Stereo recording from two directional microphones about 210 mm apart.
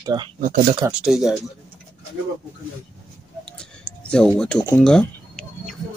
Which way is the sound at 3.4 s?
5° left (ahead or behind).